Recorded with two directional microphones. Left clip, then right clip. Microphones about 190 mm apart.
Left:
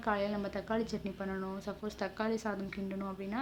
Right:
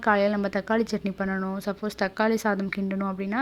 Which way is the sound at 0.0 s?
45° right (ahead or behind).